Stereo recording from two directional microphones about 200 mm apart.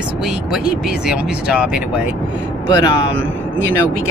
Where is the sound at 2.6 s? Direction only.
20° left (ahead or behind).